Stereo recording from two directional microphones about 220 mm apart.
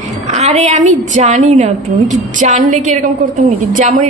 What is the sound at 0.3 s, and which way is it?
A woman's voice, 30° right (ahead or behind).